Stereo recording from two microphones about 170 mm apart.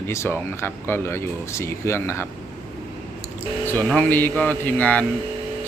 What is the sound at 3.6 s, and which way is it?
Speech, 10° left (ahead or behind).